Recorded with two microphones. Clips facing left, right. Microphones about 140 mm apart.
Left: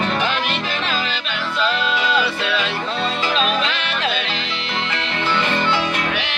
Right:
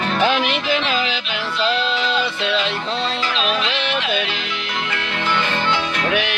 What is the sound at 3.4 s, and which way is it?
Music, 45° left (ahead or behind).